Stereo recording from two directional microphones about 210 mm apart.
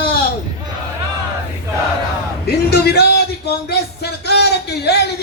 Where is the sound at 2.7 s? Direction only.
50° left (ahead or behind).